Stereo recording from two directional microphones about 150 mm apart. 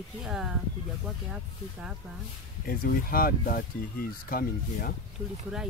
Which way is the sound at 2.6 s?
70° left (ahead or behind).